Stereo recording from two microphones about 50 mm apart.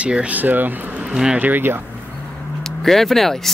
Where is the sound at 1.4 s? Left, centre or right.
Right.